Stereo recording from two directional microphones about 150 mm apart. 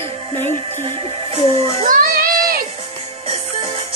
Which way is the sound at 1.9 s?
70° right (ahead or behind).